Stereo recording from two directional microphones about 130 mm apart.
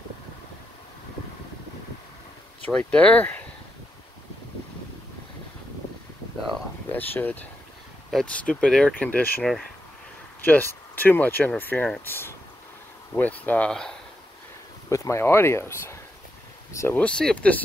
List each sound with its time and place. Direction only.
2.6 s speech: 10° left (ahead or behind)
6.9 s speech: 15° left (ahead or behind)
10.4 s speech: 15° left (ahead or behind)
14.9 s speech: 20° left (ahead or behind)